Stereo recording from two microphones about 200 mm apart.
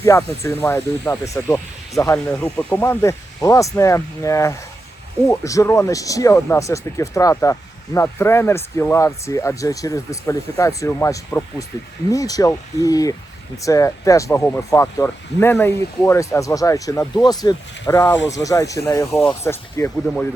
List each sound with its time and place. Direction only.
0.0 s speech: 15° left (ahead or behind)